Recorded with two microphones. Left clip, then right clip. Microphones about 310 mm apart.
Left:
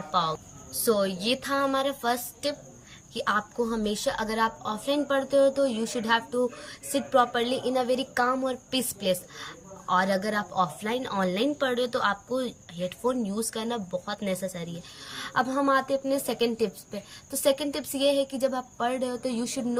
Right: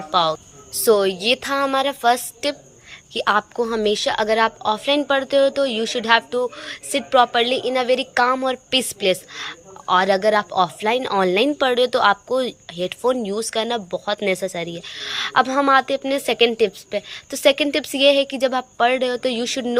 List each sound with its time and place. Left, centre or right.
0.1 s a woman's voice: centre